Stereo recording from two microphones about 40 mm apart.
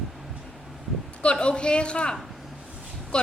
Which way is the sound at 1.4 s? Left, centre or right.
Left.